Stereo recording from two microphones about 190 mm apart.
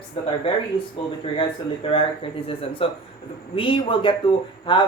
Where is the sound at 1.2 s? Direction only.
30° left (ahead or behind).